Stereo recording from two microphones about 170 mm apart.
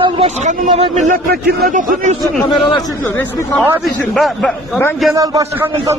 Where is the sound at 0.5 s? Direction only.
45° right (ahead or behind).